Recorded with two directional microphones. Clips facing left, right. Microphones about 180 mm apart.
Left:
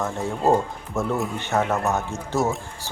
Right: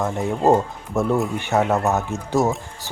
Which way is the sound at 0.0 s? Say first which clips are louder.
Right 3 dB; 15° right (ahead or behind).